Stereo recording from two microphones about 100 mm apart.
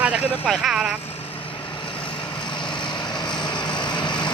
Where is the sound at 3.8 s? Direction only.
50° left (ahead or behind).